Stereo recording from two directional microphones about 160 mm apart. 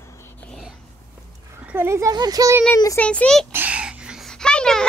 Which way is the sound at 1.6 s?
15° right (ahead or behind).